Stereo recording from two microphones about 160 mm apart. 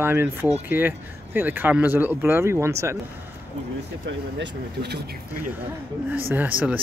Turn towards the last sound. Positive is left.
turn(degrees=-10)  # may be behind; listen again after turning